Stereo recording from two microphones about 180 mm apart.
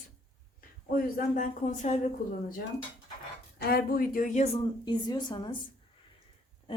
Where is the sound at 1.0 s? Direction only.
50° left (ahead or behind).